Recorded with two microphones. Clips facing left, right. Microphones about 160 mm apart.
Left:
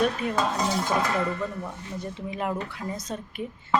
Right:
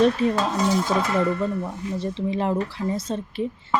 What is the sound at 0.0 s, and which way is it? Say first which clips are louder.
Dishes: right 6 dB; 30° right (ahead or behind).